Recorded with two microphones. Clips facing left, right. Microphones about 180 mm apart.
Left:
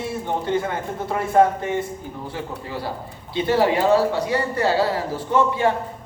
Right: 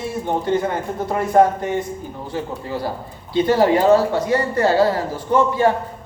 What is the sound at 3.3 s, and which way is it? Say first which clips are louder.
A man's voice: right 4 dB; 45° right (ahead or behind).